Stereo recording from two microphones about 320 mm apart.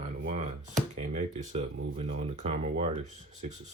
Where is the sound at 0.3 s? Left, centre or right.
Right.